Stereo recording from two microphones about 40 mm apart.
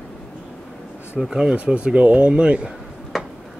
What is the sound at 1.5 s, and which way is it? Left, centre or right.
Speech, right.